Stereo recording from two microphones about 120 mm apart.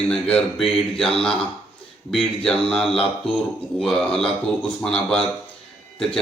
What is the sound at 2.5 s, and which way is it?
A man's voice, 5° left (ahead or behind).